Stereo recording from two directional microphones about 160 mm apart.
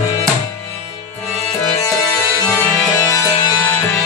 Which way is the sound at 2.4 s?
20° left (ahead or behind).